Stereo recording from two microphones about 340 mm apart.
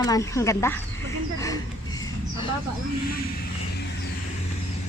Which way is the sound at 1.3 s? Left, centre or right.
Centre.